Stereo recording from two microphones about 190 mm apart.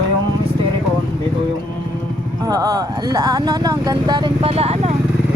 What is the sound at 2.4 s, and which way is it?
Speech, 20° right (ahead or behind).